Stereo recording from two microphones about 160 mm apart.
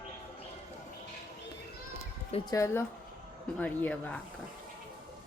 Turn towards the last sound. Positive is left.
turn(degrees=5)  # may be behind; listen again after turning